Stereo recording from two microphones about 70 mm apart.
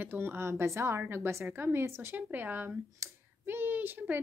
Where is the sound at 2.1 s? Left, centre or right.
Right.